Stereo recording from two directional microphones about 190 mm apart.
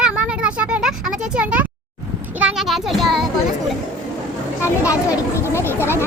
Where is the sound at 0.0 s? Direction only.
5° right (ahead or behind).